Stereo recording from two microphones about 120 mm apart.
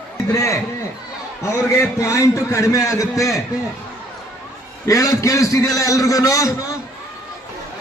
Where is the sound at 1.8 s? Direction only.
25° left (ahead or behind).